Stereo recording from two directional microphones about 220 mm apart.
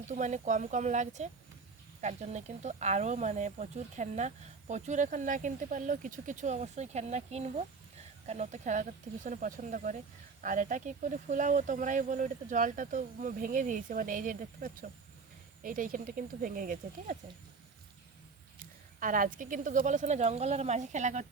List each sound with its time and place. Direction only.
0.1 s speech: 35° right (ahead or behind)
18.9 s speech: 40° right (ahead or behind)